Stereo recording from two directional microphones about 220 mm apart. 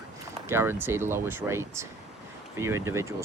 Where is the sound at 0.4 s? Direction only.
10° right (ahead or behind).